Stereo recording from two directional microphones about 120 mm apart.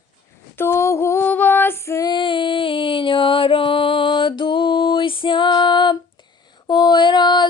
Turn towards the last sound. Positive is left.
turn(degrees=40)  # may be behind; listen again after turning